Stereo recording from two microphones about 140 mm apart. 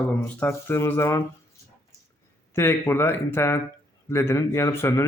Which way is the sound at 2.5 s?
20° left (ahead or behind).